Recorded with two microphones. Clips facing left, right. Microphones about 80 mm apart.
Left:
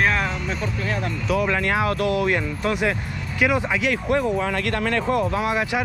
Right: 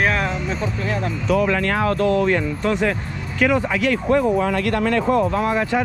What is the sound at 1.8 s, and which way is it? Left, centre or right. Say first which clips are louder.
Speech: right 3 dB; right.